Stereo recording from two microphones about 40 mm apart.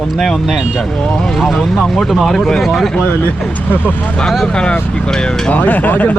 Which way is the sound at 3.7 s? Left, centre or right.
Left.